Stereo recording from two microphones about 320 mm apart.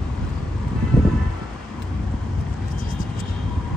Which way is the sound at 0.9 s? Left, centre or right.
Centre.